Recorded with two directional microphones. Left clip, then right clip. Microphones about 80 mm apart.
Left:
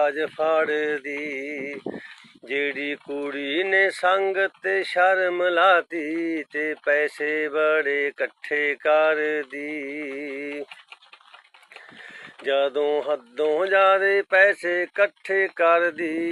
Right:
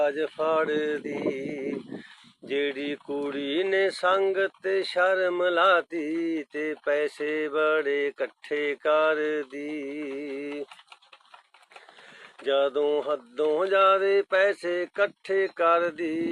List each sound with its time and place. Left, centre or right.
0.0 s speech: right
12.4 s speech: right